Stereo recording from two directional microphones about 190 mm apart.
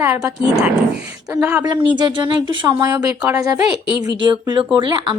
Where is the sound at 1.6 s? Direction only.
25° right (ahead or behind).